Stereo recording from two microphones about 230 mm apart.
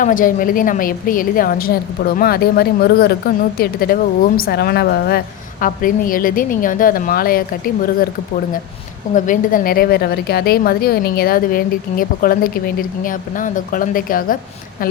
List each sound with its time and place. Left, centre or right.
0.0 s a woman's voice: left
9.1 s a woman's voice: left